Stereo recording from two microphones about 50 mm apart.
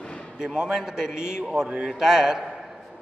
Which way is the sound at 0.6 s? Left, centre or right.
Centre.